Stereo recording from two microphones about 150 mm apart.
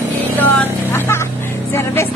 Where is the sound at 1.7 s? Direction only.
15° left (ahead or behind).